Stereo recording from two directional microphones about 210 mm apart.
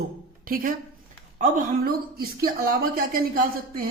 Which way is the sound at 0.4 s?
40° right (ahead or behind).